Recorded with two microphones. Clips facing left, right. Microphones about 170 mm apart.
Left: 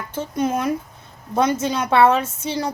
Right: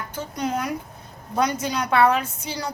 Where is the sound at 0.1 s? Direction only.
25° left (ahead or behind).